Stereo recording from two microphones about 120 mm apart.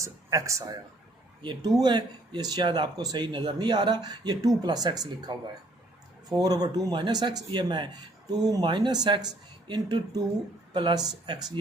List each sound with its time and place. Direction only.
0.0 s speech: 25° right (ahead or behind)
1.4 s speech: 40° right (ahead or behind)